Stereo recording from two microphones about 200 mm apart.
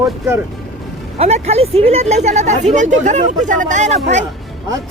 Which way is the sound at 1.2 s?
30° right (ahead or behind).